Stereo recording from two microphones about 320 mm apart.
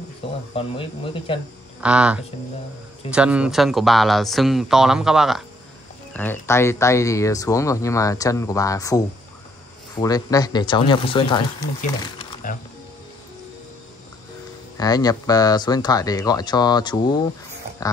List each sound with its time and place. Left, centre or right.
0.6 s speech: centre
1.8 s speech: centre
6.4 s speech: centre
12.0 s a sound: centre
14.8 s speech: centre